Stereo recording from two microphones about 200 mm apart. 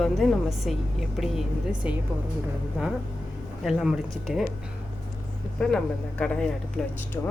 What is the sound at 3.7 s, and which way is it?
Speech, centre (ahead or behind).